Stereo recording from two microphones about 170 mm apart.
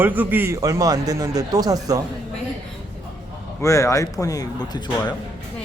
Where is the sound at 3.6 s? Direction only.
20° left (ahead or behind).